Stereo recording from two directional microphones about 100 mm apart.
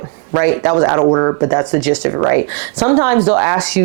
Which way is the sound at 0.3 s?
25° right (ahead or behind).